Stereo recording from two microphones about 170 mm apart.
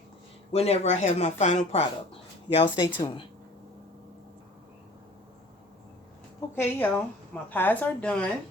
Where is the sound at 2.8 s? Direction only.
25° left (ahead or behind).